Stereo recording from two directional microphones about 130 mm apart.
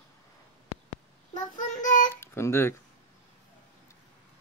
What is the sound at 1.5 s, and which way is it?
Child singing, 90° left.